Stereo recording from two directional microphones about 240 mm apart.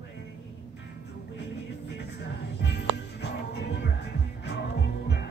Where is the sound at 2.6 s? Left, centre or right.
Left.